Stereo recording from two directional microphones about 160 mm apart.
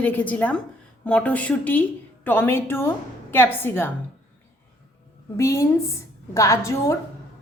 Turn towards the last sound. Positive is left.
turn(degrees=20)  # may be behind; listen again after turning